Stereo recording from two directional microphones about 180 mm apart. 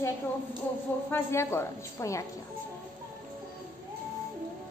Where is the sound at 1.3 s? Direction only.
15° left (ahead or behind).